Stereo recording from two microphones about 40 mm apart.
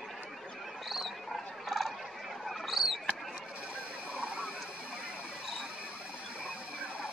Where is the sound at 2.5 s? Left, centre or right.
Centre.